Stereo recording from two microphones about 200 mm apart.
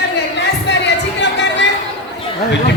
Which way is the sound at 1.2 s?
60° left (ahead or behind).